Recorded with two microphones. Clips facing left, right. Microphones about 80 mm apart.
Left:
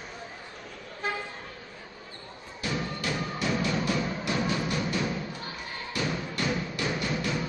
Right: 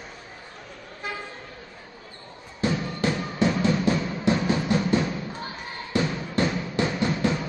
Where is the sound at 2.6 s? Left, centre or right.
Right.